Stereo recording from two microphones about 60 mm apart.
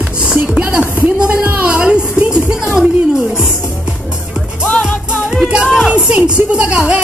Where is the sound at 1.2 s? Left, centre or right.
Right.